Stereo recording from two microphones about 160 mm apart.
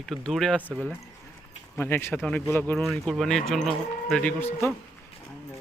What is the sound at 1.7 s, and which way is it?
Speech, 15° left (ahead or behind).